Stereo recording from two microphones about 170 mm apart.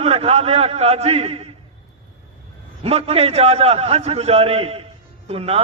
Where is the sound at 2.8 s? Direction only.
35° right (ahead or behind).